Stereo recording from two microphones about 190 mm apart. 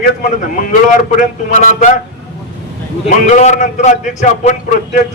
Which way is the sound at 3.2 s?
40° left (ahead or behind).